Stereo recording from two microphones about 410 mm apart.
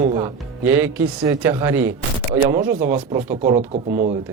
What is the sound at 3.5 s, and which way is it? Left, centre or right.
Speech, centre.